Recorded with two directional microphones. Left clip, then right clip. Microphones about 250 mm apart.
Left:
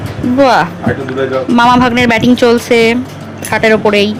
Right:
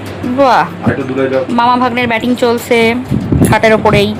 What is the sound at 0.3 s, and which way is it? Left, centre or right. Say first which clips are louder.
A woman's voice: even; left.